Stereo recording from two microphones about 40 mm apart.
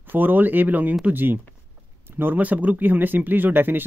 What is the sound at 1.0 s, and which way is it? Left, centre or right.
Speech, right.